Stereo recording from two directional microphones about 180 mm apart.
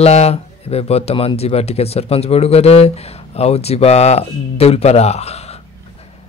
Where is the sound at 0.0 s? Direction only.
35° left (ahead or behind).